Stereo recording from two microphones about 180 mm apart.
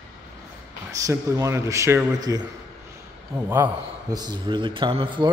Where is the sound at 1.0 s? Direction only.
15° right (ahead or behind).